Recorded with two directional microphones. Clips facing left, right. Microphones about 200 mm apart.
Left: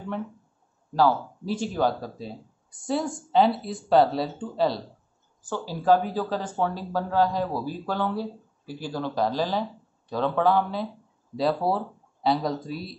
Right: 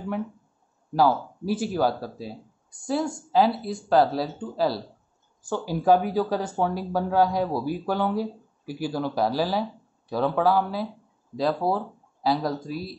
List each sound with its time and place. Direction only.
0.9 s speech: 10° right (ahead or behind)